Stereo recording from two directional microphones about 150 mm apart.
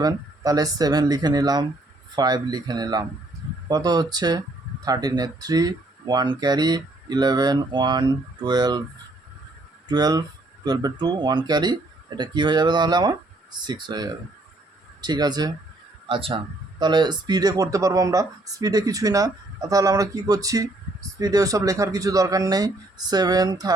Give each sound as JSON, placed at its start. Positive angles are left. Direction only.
{"t": 0.0, "sound": "speech", "side_deg": -25}
{"t": 9.9, "sound": "speech", "side_deg": -25}